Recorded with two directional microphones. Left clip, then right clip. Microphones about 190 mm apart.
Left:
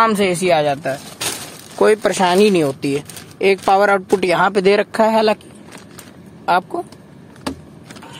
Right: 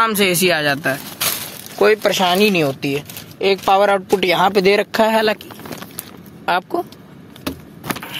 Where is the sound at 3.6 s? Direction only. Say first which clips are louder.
Even; 25° left (ahead or behind).